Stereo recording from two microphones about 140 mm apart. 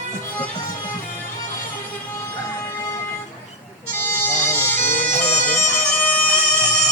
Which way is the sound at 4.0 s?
15° left (ahead or behind).